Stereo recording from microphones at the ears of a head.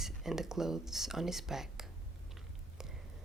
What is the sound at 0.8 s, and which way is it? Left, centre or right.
Speech, centre.